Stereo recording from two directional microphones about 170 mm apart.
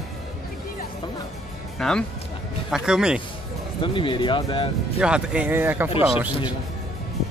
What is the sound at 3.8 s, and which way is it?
Speech, 30° left (ahead or behind).